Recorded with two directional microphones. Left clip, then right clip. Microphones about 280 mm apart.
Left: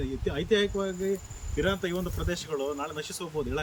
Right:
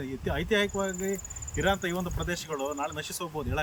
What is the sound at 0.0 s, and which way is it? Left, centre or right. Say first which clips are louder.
Speech: left 1 dB; centre.